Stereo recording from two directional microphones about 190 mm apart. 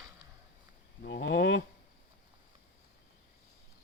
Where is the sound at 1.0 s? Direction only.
70° left (ahead or behind).